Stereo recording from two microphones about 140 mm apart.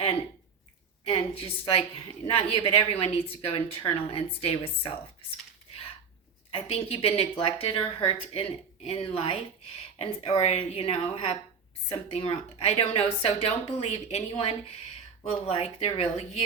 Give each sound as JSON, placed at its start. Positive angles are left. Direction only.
{"t": 1.0, "sound": "a woman's voice", "side_deg": 45}
{"t": 6.5, "sound": "a woman's voice", "side_deg": 45}